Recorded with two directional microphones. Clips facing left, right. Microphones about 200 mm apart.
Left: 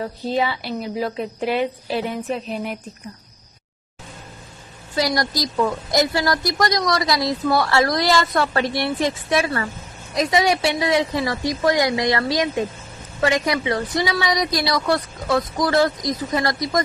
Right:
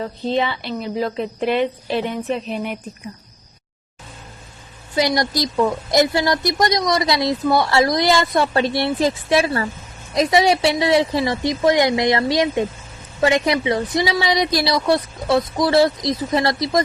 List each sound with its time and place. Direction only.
0.0 s a woman's voice: 5° left (ahead or behind)
4.9 s a woman's voice: 20° right (ahead or behind)